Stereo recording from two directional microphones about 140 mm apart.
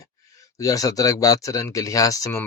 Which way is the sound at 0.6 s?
25° left (ahead or behind).